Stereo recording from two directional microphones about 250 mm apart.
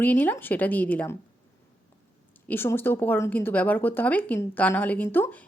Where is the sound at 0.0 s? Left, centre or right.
Centre.